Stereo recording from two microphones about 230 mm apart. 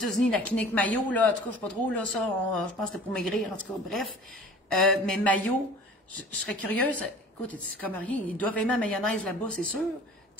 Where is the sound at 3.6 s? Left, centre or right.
Centre.